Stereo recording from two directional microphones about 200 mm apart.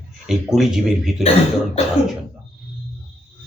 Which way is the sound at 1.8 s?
30° left (ahead or behind).